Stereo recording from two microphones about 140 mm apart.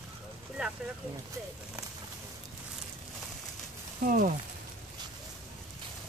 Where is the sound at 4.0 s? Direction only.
75° right (ahead or behind).